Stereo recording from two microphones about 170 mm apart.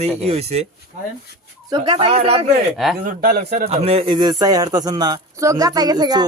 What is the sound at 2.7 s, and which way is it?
Speech, centre (ahead or behind).